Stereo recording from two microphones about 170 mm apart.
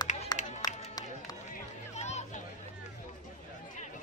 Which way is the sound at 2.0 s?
40° left (ahead or behind).